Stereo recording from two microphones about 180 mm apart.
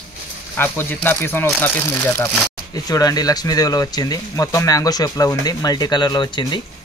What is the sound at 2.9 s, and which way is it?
Speech, 20° left (ahead or behind).